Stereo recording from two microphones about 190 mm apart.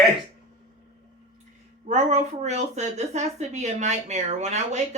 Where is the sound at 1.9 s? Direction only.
40° right (ahead or behind).